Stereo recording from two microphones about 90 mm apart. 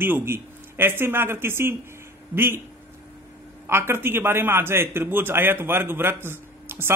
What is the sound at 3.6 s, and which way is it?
A man's voice, 25° right (ahead or behind).